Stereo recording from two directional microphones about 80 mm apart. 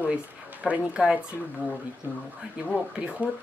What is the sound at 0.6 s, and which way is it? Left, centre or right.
Speech, centre.